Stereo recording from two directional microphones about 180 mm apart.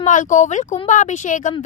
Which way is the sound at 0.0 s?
45° left (ahead or behind).